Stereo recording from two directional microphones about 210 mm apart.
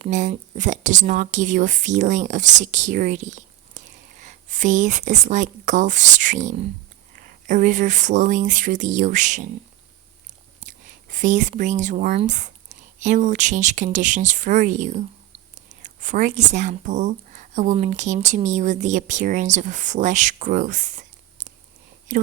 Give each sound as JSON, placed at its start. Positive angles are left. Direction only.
{"t": 0.0, "sound": "speech", "side_deg": -35}